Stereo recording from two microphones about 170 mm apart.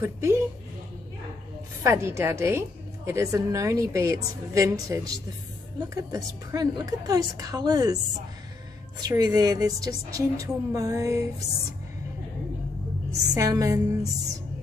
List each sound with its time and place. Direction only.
0.0 s a woman's voice: 15° right (ahead or behind)
1.8 s a woman's voice: 15° right (ahead or behind)
9.0 s a woman's voice: 20° right (ahead or behind)
13.3 s a woman's voice: 20° right (ahead or behind)